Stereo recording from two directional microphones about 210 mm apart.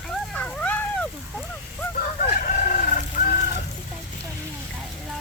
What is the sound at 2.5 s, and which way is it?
Chicken, 40° left (ahead or behind).